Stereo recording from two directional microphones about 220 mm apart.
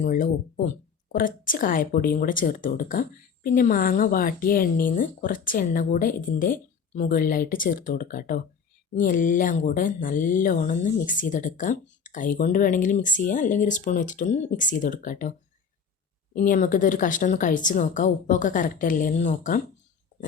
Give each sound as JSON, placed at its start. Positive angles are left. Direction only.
{"t": 0.0, "sound": "speech", "side_deg": 40}
{"t": 16.3, "sound": "speech", "side_deg": 40}